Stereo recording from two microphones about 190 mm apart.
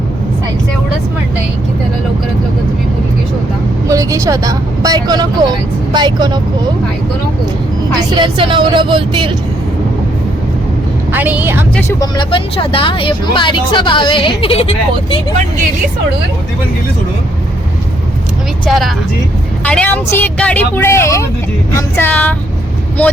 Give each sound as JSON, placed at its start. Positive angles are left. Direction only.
{"t": 3.8, "sound": "a woman's voice", "side_deg": -15}
{"t": 7.9, "sound": "a woman's voice", "side_deg": -25}
{"t": 11.1, "sound": "speech", "side_deg": -10}
{"t": 11.9, "sound": "speech", "side_deg": 20}
{"t": 18.6, "sound": "speech", "side_deg": 0}